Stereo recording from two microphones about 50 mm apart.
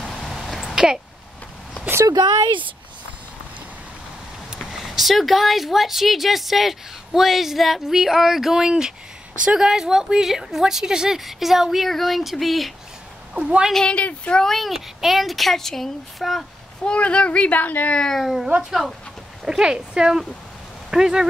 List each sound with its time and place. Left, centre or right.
0.0 s a sound: centre
4.6 s a woman's voice: centre; by 9.7 s right
9.7 s a woman's voice: centre
13.3 s a woman's voice: centre
13.8 s a child's voice: left
14.4 s speech: centre
16.8 s a child's voice: left
17.9 s speech: centre
18.2 s speech: centre
19.4 s a woman's voice: centre